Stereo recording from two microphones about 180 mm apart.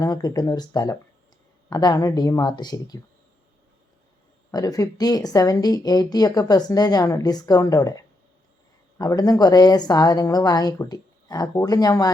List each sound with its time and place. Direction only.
0.0 s speech: 20° left (ahead or behind)
4.5 s speech: 20° left (ahead or behind)